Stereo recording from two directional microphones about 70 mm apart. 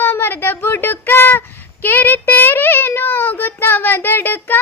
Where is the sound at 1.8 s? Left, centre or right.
Left.